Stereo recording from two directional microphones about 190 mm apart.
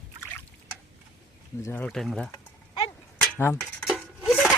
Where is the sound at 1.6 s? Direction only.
10° left (ahead or behind).